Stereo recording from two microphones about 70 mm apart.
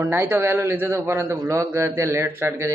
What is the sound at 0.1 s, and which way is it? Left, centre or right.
A man's voice, right.